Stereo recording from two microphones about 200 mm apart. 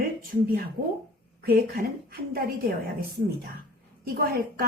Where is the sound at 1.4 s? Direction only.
50° right (ahead or behind).